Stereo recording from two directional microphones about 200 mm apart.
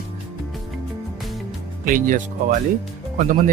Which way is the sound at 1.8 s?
40° right (ahead or behind).